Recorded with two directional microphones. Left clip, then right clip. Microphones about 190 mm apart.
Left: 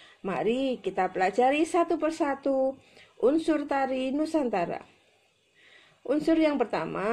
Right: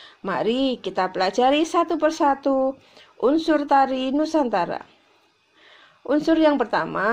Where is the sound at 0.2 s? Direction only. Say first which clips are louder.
Right 5 dB; 30° right (ahead or behind).